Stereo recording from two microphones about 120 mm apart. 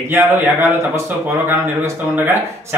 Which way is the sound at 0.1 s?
20° right (ahead or behind).